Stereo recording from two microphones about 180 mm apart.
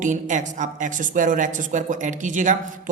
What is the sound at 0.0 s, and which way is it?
A woman's voice, 45° right (ahead or behind).